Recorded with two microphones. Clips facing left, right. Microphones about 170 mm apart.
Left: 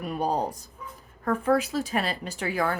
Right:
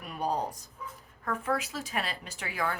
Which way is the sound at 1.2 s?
40° left (ahead or behind).